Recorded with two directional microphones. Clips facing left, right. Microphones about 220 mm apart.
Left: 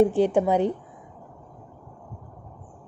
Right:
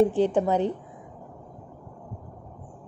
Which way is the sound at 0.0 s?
15° left (ahead or behind).